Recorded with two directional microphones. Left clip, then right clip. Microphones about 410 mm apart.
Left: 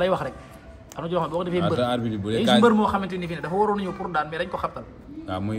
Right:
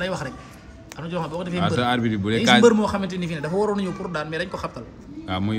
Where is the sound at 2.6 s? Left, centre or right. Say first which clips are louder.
Right 2 dB; centre.